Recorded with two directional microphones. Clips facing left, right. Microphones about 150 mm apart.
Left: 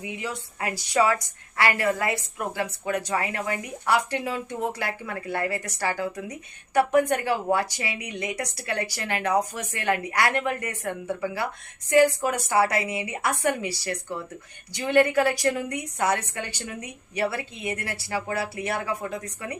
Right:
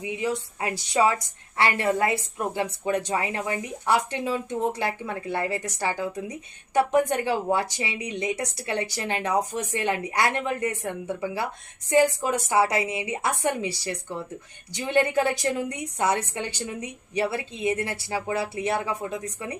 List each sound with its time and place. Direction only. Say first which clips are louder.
0.0 s a woman's voice: right 5 dB; 20° right (ahead or behind)